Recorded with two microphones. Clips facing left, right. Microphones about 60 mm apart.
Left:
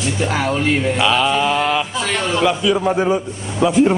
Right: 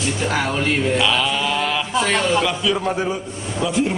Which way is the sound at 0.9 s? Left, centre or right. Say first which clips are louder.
Left 3 dB; centre.